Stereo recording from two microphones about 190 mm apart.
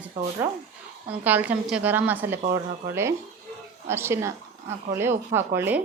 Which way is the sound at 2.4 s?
45° right (ahead or behind).